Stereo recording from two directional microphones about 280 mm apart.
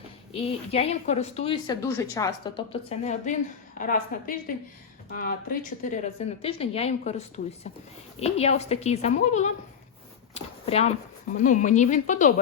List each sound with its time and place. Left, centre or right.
0.3 s a woman's voice: left
10.3 s a sound: left
11.3 s a woman's voice: left